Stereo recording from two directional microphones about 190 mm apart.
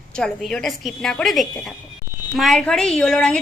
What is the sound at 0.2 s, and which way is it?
A woman's voice, 5° left (ahead or behind).